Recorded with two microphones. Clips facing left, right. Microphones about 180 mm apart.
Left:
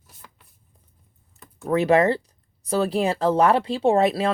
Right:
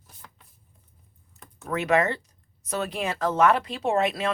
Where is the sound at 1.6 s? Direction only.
35° left (ahead or behind).